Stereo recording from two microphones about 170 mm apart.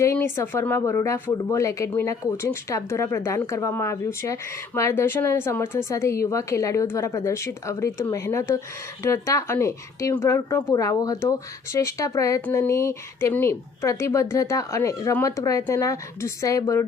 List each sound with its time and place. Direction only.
0.0 s speech: 15° left (ahead or behind)